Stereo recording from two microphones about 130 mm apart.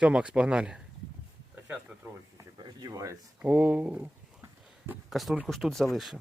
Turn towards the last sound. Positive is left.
turn(degrees=0)  # may be behind; listen again after turning